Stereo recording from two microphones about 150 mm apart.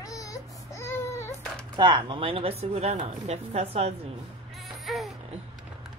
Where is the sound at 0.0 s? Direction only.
25° left (ahead or behind).